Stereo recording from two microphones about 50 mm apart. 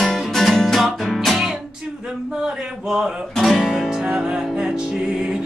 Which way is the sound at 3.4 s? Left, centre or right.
Centre.